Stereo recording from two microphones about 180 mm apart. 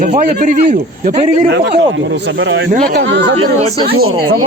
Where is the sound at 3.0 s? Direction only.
80° right.